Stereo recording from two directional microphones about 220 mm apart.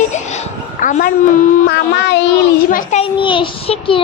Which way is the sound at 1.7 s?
50° left (ahead or behind).